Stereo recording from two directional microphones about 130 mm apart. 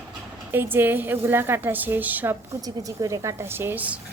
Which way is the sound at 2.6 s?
25° right (ahead or behind).